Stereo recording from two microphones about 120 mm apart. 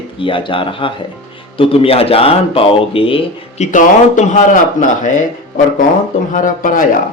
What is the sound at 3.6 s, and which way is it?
Speech, 80° left.